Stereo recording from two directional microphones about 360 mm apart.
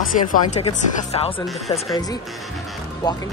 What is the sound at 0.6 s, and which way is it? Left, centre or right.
Speech, centre.